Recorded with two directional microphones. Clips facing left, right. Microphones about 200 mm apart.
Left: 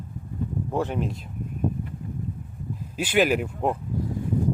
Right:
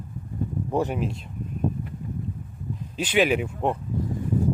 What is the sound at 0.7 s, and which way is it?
Speech, 15° right (ahead or behind).